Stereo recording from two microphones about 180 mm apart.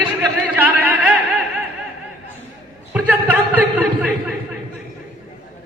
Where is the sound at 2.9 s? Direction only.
5° right (ahead or behind).